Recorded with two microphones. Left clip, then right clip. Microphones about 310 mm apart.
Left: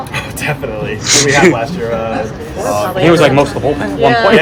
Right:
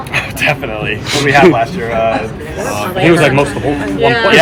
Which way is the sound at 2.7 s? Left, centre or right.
Left.